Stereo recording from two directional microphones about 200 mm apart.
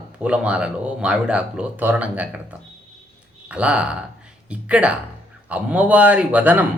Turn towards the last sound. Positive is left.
turn(degrees=-10)  # may be behind; listen again after turning